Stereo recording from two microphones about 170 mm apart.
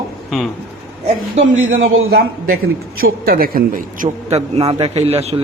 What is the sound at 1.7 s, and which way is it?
A man's voice, 60° right (ahead or behind).